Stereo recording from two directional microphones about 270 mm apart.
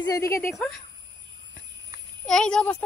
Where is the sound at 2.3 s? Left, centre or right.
Centre.